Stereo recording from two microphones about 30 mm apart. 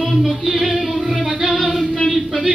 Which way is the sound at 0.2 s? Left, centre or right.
Centre.